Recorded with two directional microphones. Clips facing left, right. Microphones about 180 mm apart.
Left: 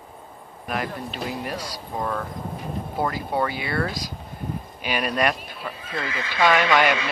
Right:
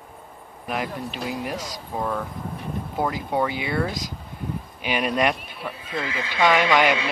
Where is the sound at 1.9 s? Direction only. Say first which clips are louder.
Right 1 dB; 5° right (ahead or behind).